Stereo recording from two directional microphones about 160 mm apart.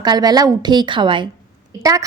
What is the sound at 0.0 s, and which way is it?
A woman's voice, 25° right (ahead or behind).